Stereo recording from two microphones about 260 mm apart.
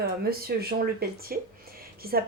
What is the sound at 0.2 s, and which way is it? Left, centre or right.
Speech, right.